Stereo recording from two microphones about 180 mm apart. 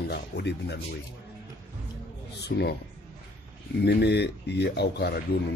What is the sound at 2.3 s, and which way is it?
Speech, 65° left (ahead or behind).